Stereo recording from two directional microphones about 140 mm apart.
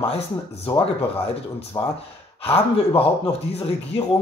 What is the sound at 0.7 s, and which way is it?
Speech, 40° left (ahead or behind).